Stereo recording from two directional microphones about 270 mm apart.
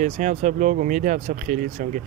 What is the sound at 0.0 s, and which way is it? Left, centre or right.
Speech, right.